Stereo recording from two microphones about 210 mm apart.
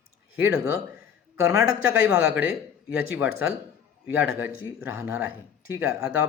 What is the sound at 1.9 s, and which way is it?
Speech, 5° right (ahead or behind).